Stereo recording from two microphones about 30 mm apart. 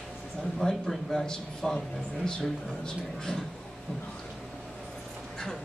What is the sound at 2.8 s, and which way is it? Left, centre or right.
Speech, left.